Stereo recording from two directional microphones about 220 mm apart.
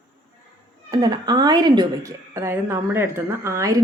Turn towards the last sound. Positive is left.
turn(degrees=-15)  # may be behind; listen again after turning